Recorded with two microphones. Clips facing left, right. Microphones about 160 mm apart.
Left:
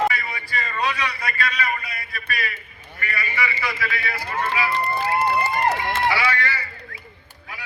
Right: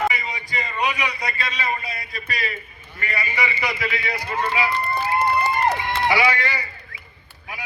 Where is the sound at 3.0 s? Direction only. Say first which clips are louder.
Right 1 dB; 25° right (ahead or behind).